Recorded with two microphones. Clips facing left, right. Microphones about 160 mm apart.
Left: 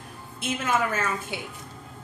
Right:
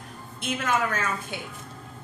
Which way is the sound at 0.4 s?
5° left (ahead or behind).